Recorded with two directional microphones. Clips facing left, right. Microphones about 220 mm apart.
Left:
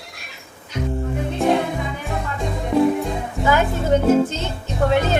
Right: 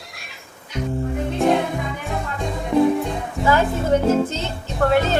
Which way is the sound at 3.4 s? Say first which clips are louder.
Right 1 dB; 20° left (ahead or behind).